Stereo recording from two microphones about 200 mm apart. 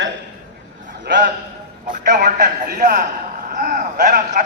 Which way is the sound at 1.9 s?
40° right (ahead or behind).